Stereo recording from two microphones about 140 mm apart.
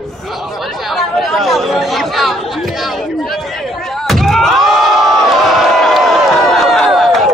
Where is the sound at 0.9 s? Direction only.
Centre (ahead or behind).